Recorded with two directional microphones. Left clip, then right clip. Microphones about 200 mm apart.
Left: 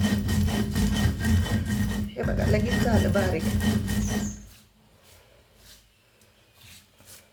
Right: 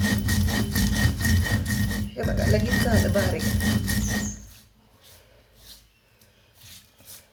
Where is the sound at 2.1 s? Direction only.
10° left (ahead or behind).